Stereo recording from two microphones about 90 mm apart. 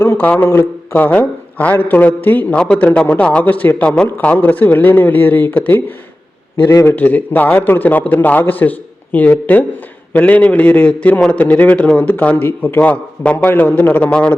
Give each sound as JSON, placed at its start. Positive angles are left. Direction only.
{"t": 0.0, "sound": "a man's voice", "side_deg": 25}